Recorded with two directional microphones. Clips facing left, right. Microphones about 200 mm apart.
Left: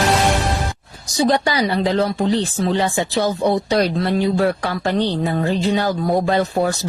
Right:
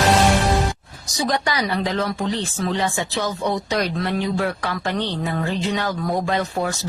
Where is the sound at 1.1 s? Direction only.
30° left (ahead or behind).